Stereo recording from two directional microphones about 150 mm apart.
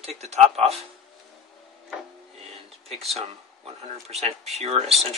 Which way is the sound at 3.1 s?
40° right (ahead or behind).